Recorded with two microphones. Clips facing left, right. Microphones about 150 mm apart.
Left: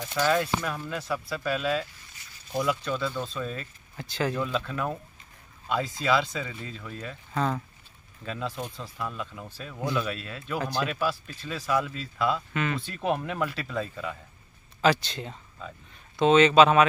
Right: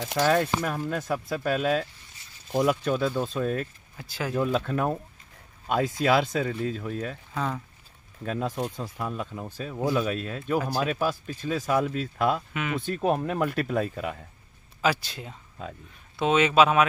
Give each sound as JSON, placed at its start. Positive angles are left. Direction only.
{"t": 0.2, "sound": "speech", "side_deg": -45}
{"t": 3.9, "sound": "speech", "side_deg": -5}
{"t": 4.4, "sound": "speech", "side_deg": -45}
{"t": 7.3, "sound": "speech", "side_deg": 0}
{"t": 8.2, "sound": "speech", "side_deg": -50}
{"t": 12.5, "sound": "speech", "side_deg": -5}
{"t": 12.8, "sound": "speech", "side_deg": -45}
{"t": 14.8, "sound": "speech", "side_deg": -5}